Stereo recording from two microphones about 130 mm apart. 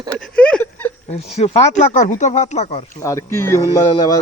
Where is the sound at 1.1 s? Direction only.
60° left (ahead or behind).